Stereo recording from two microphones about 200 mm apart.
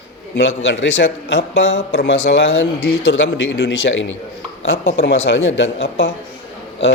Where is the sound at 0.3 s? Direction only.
65° left (ahead or behind).